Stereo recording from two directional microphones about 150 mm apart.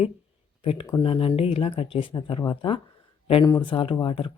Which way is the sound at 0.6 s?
35° left (ahead or behind).